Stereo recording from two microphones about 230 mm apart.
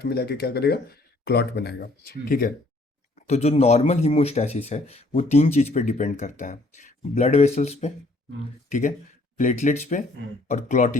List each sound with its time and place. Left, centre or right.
0.0 s speech: left
3.2 s speech: left
9.4 s speech: left